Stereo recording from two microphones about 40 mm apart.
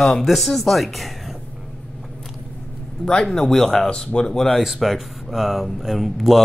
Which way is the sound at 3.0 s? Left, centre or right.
Centre.